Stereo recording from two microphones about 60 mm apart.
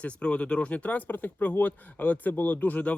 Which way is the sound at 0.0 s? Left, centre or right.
Centre.